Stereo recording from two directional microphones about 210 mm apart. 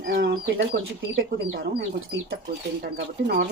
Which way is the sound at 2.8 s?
50° right (ahead or behind).